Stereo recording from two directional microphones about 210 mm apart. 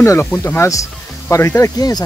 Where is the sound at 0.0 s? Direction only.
10° left (ahead or behind).